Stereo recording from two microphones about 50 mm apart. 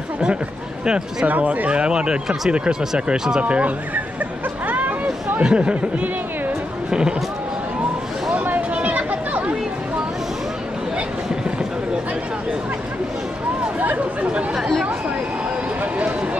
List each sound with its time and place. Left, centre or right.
1.2 s speech: right
1.7 s speech: centre
4.6 s hubbub: right
5.4 s speech: right
8.5 s chatter: right
13.7 s chatter: right